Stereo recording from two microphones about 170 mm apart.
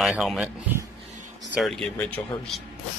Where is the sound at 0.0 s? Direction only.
Centre (ahead or behind).